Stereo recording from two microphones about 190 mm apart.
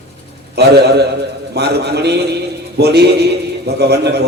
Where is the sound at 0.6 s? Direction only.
60° right (ahead or behind).